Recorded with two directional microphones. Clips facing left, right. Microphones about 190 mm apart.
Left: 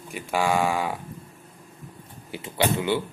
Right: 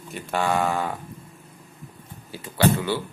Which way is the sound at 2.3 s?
20° left (ahead or behind).